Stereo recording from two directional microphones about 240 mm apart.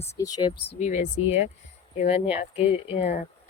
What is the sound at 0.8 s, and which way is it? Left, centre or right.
Speech, left.